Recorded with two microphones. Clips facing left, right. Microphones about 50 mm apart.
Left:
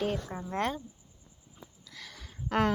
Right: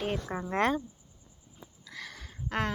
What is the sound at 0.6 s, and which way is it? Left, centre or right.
Speech, right.